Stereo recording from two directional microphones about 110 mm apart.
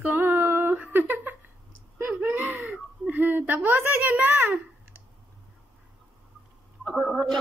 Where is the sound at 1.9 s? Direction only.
15° right (ahead or behind).